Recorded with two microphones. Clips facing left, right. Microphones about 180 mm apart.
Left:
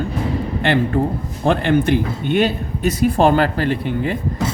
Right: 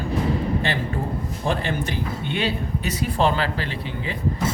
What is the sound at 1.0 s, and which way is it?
Speech, 60° left (ahead or behind).